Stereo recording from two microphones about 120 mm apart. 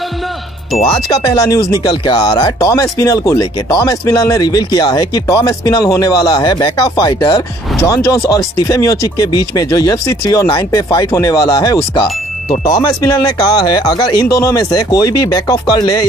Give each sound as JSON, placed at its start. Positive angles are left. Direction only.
{"t": 1.2, "sound": "speech", "side_deg": 30}